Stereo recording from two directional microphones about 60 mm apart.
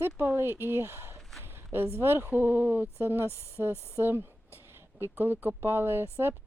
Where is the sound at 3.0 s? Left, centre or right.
Right.